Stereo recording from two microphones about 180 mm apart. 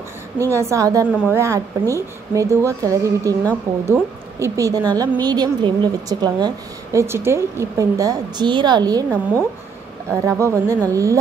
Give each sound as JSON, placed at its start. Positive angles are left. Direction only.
{"t": 0.5, "sound": "a woman's voice", "side_deg": -15}